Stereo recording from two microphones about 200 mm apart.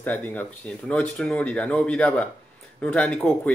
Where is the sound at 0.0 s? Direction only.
10° left (ahead or behind).